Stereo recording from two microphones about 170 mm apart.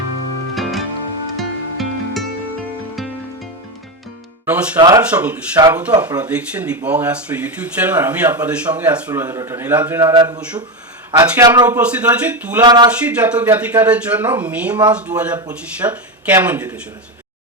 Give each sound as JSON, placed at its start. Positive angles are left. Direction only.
{"t": 0.5, "sound": "music", "side_deg": 0}
{"t": 4.4, "sound": "speech", "side_deg": -10}
{"t": 4.8, "sound": "a man's voice", "side_deg": -20}
{"t": 5.1, "sound": "a man's voice", "side_deg": -10}
{"t": 11.6, "sound": "speech", "side_deg": -10}
{"t": 12.6, "sound": "a man's voice", "side_deg": -25}
{"t": 13.0, "sound": "speech", "side_deg": -10}